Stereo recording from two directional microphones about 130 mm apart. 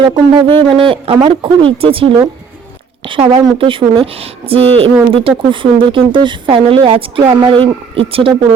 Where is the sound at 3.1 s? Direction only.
40° right (ahead or behind).